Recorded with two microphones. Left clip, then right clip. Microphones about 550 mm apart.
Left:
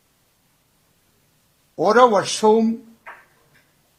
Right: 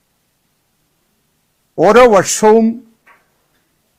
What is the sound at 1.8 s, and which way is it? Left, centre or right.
Speech, right.